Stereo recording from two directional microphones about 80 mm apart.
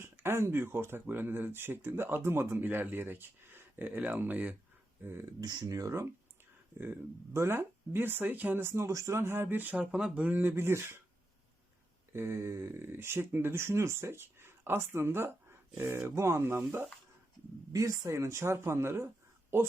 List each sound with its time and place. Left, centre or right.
0.0 s speech: right
5.4 s speech: right
5.6 s speech: right
7.3 s speech: right
12.1 s speech: right
17.7 s speech: right